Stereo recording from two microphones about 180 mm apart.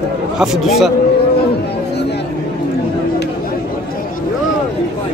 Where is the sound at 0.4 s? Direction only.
Centre (ahead or behind).